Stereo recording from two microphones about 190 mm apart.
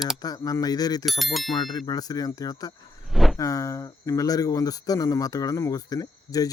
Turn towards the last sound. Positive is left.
turn(degrees=20)  # may be behind; listen again after turning